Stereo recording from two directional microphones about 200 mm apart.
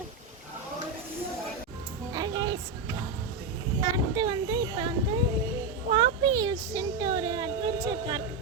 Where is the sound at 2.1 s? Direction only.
20° right (ahead or behind).